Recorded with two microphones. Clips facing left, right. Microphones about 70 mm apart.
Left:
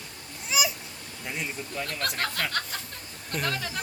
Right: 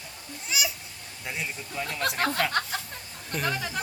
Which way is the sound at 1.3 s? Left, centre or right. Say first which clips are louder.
Even; centre.